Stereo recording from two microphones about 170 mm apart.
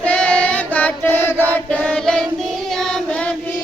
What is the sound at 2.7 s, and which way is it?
Child singing, 5° left (ahead or behind).